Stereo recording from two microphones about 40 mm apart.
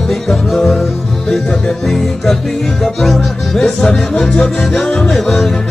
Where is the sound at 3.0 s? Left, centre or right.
Centre.